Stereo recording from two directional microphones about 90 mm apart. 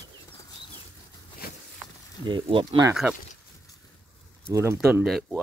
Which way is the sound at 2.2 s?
65° right (ahead or behind).